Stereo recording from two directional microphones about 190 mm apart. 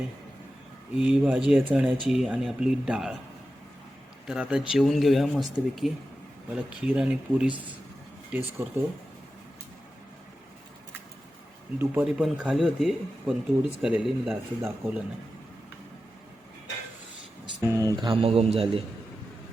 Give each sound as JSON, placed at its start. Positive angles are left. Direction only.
{"t": 0.9, "sound": "speech", "side_deg": -5}
{"t": 4.3, "sound": "speech", "side_deg": -5}
{"t": 11.8, "sound": "speech", "side_deg": -5}
{"t": 17.6, "sound": "speech", "side_deg": -15}